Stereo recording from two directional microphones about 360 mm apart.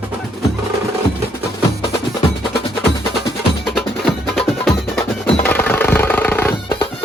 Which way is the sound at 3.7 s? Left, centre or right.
Centre.